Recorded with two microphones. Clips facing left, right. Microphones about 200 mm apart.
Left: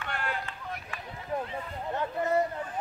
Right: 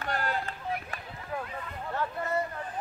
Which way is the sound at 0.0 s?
40° right (ahead or behind).